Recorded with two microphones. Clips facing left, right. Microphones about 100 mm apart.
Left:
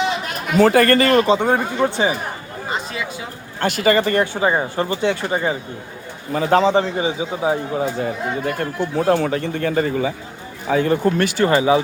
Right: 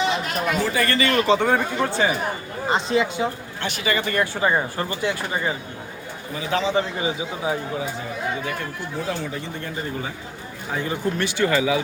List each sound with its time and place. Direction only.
0.6 s speech: 55° left (ahead or behind)
1.2 s speech: 20° left (ahead or behind)
2.6 s speech: 25° right (ahead or behind)
3.6 s a man's voice: 40° left (ahead or behind)
4.2 s speech: 20° left (ahead or behind)
6.3 s a man's voice: 45° left (ahead or behind); by 7.6 s 30° left (ahead or behind)
7.9 s speech: 55° left (ahead or behind)
11.3 s a man's voice: 35° left (ahead or behind)